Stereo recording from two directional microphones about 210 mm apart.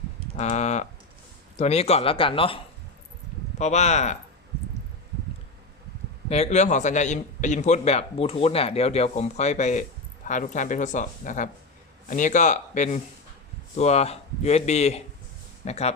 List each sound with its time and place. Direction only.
0.3 s a man's voice: 30° left (ahead or behind)
3.6 s a man's voice: 35° left (ahead or behind)
6.2 s a man's voice: 30° left (ahead or behind)